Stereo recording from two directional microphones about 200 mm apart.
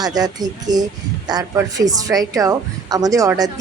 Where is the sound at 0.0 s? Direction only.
20° right (ahead or behind).